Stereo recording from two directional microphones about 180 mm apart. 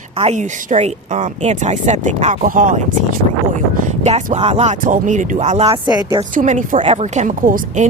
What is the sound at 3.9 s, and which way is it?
Speech, 40° right (ahead or behind).